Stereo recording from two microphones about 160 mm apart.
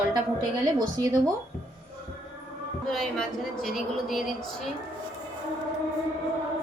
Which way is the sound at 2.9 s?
Centre (ahead or behind).